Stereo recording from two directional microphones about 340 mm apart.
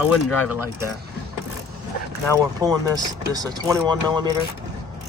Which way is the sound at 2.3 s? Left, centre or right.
Centre.